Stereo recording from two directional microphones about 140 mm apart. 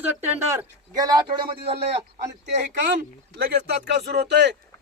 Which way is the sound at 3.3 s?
90° right.